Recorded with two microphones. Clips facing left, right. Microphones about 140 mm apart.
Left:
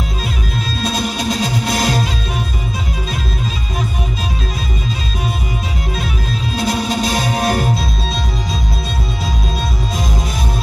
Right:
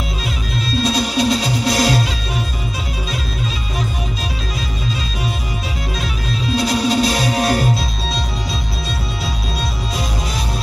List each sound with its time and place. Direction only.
0.7 s music: 50° left (ahead or behind)
6.5 s music: 50° left (ahead or behind)